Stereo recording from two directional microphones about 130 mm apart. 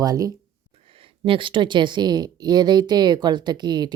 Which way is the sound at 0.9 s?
45° right (ahead or behind).